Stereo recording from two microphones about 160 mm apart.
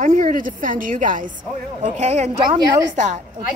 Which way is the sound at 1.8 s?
45° right (ahead or behind).